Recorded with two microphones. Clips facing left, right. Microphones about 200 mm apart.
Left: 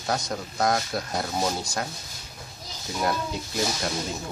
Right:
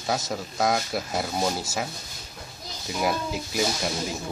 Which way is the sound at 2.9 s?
5° right (ahead or behind).